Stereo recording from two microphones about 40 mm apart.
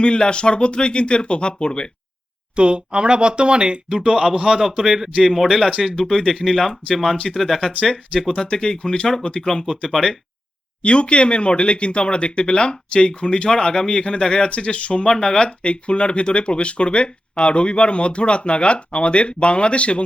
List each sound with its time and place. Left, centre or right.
0.0 s speech: left
2.6 s a man's voice: right
5.2 s speech: centre
6.0 s speech: centre
8.3 s speech: centre
9.5 s speech: centre
10.8 s speech: left